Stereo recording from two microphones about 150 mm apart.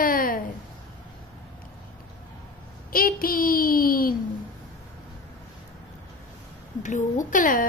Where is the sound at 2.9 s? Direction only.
75° left (ahead or behind).